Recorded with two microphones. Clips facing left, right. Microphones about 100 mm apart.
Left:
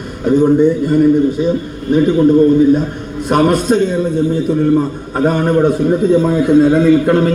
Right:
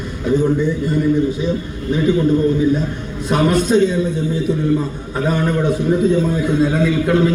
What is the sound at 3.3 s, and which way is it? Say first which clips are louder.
A man's voice: left 3 dB; 50° left (ahead or behind).